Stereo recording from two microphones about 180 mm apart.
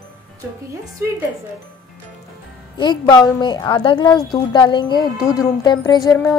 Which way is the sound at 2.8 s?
25° left (ahead or behind).